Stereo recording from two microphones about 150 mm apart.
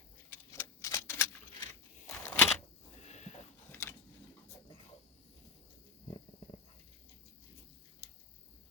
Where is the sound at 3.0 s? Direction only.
50° left (ahead or behind).